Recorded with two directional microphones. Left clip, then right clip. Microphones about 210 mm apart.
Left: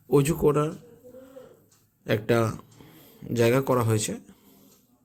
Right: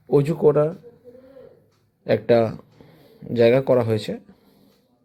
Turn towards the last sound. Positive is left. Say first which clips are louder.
# right 5 dB
turn(degrees=10)  # may be behind; listen again after turning